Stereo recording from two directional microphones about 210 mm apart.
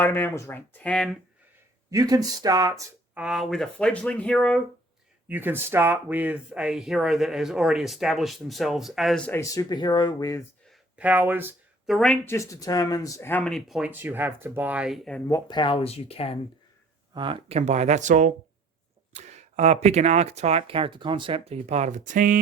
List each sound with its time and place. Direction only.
0.0 s speech: 10° left (ahead or behind)
1.9 s speech: 15° right (ahead or behind)
3.2 s speech: centre (ahead or behind)
5.3 s speech: 10° right (ahead or behind); by 10.4 s 15° left (ahead or behind)
10.7 s a sound: 5° right (ahead or behind)
11.9 s speech: centre (ahead or behind)
15.3 s speech: 20° left (ahead or behind)
17.2 s speech: 25° right (ahead or behind); by 22.4 s 40° right (ahead or behind)